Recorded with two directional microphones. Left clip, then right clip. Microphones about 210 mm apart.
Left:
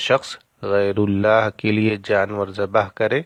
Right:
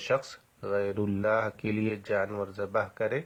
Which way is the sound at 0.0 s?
35° left (ahead or behind).